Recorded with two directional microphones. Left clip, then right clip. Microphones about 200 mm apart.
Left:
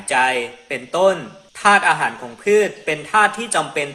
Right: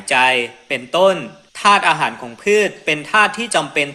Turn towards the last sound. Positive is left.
turn(degrees=-35)  # may be behind; listen again after turning